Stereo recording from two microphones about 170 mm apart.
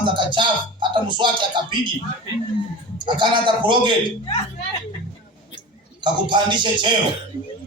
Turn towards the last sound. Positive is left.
turn(degrees=-25)  # may be behind; listen again after turning